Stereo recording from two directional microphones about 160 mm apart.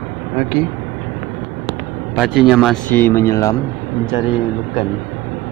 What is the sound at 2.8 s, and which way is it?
Speech, 10° left (ahead or behind).